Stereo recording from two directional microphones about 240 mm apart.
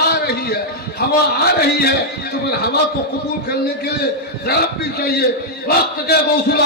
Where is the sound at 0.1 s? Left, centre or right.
Left.